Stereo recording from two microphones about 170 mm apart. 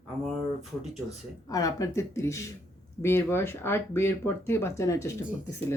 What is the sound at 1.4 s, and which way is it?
A woman's voice, 20° left (ahead or behind).